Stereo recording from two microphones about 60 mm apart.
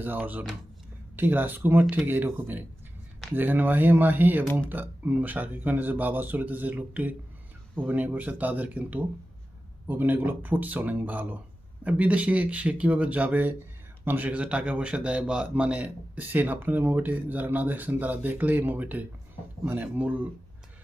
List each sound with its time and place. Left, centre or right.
0.0 s a man's voice: right
14.3 s a man's voice: right